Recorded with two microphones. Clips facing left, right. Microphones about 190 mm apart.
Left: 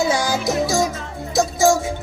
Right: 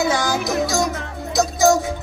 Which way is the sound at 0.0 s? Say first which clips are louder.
Left 1 dB; 25° left (ahead or behind).